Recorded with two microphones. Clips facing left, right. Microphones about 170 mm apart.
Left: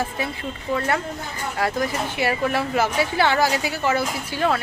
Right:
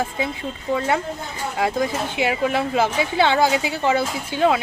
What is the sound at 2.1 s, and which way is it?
A woman's voice, 15° right (ahead or behind).